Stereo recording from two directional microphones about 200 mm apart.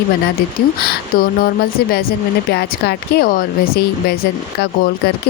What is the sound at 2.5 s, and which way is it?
Speech, 55° left (ahead or behind).